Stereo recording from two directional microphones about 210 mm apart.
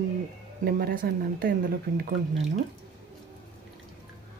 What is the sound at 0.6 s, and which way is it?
Speech, 45° right (ahead or behind).